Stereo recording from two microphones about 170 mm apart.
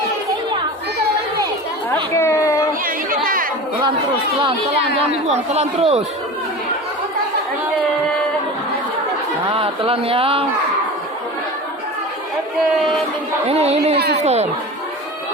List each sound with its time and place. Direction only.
2.1 s a sound: 15° left (ahead or behind)
3.2 s chatter: 55° right (ahead or behind)
5.3 s speech: 40° right (ahead or behind)
9.5 s speech: 30° right (ahead or behind)
13.5 s speech: 40° right (ahead or behind)
13.9 s speech: 70° right (ahead or behind)
14.2 s speech: 40° right (ahead or behind)